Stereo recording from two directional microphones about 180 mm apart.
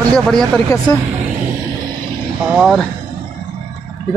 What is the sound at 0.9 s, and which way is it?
Speech, 15° left (ahead or behind).